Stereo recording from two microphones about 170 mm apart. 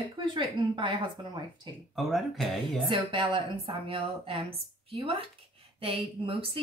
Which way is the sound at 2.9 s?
30° right (ahead or behind).